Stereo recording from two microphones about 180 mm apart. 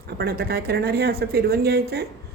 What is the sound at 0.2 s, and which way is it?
A woman's voice, 60° right (ahead or behind).